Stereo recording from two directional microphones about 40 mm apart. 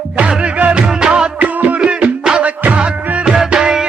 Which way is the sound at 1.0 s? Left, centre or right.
Right.